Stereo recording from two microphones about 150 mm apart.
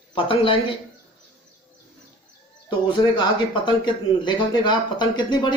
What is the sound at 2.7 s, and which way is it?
Speech, 35° left (ahead or behind).